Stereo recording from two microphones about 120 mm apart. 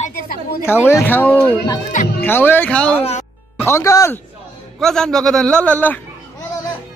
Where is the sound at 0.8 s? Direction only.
15° left (ahead or behind).